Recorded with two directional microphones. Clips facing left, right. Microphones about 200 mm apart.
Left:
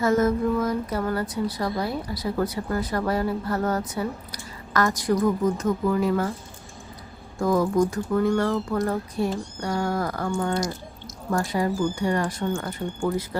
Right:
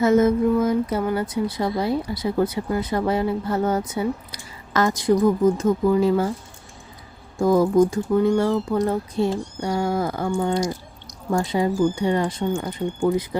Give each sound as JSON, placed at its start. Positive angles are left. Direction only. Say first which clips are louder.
{"t": 0.0, "sound": "speech", "louder": "right 4 dB", "side_deg": -20}
{"t": 7.3, "sound": "speech", "louder": "right 5 dB", "side_deg": -25}